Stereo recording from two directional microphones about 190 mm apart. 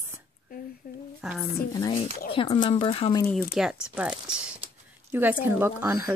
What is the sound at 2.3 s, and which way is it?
Speech, 30° left (ahead or behind).